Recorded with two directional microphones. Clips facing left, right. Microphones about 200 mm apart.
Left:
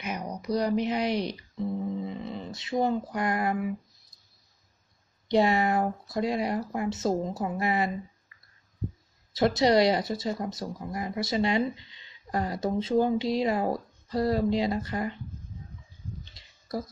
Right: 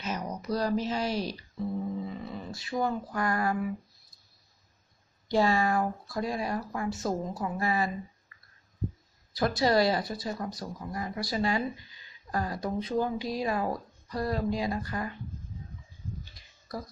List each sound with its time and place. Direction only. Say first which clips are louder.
0.0 s speech: even; 15° left (ahead or behind)
5.3 s speech: left 2 dB; 20° left (ahead or behind)
9.3 s speech: left 3 dB; 25° left (ahead or behind)
16.3 s a sound: left 7 dB; 25° left (ahead or behind)